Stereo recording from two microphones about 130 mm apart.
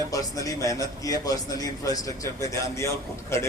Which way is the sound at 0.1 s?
25° left (ahead or behind).